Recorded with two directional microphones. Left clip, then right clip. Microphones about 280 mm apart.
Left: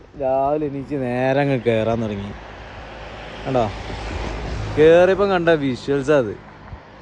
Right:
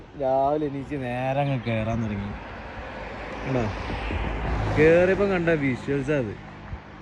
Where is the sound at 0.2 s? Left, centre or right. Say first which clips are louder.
Left 3 dB; centre.